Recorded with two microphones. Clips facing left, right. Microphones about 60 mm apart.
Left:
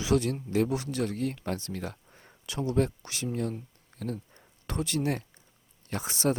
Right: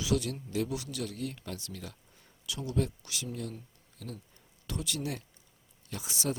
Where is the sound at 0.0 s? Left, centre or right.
Left.